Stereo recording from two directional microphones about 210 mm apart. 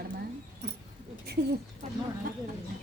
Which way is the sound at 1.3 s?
50° right (ahead or behind).